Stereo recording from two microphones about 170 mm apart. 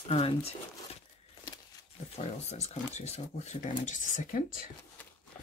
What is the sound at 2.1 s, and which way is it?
Speech, 40° left (ahead or behind).